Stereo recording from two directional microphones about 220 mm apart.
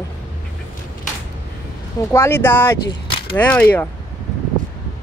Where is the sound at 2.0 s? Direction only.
10° left (ahead or behind).